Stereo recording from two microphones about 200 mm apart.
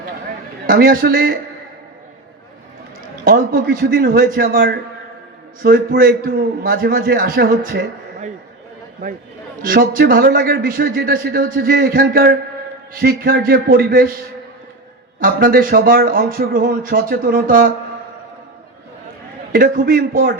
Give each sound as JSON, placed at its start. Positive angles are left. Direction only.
{"t": 0.7, "sound": "a man's voice", "side_deg": -45}
{"t": 3.2, "sound": "a man's voice", "side_deg": -45}
{"t": 9.6, "sound": "a man's voice", "side_deg": -45}
{"t": 15.2, "sound": "a man's voice", "side_deg": -45}
{"t": 19.5, "sound": "a man's voice", "side_deg": -45}